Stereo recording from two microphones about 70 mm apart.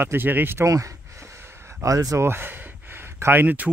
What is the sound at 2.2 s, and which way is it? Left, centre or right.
Speech, right.